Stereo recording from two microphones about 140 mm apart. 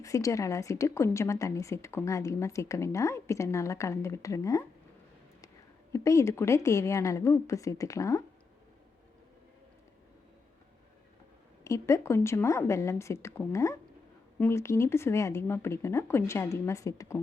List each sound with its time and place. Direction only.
0.0 s a woman's voice: 20° left (ahead or behind)
5.9 s a woman's voice: 20° left (ahead or behind)
11.6 s a woman's voice: 20° left (ahead or behind)